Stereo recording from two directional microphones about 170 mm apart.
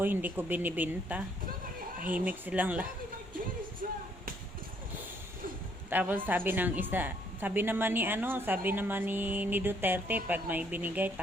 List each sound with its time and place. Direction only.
0.0 s a woman's voice: 10° right (ahead or behind)
3.8 s a sound: 55° right (ahead or behind)
5.9 s a woman's voice: 10° right (ahead or behind)